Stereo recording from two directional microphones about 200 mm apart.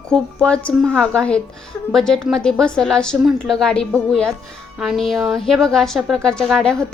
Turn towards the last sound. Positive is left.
turn(degrees=5)  # may be behind; listen again after turning